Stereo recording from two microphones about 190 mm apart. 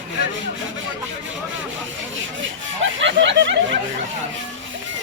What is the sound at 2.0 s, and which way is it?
Speech, 80° right.